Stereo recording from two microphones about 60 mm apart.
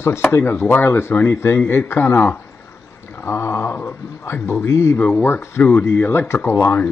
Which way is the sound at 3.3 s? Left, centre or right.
Left.